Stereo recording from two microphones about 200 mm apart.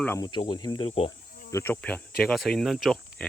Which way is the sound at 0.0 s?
10° left (ahead or behind).